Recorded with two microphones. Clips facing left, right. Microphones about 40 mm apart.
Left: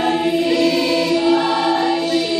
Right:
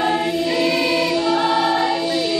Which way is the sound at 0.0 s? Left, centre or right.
Centre.